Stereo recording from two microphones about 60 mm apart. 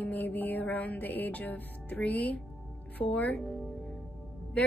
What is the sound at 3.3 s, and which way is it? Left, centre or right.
Speech, centre.